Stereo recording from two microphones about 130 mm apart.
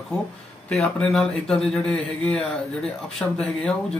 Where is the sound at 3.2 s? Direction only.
15° left (ahead or behind).